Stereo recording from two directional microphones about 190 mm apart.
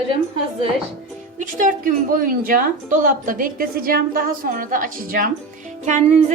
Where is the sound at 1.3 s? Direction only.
45° right (ahead or behind).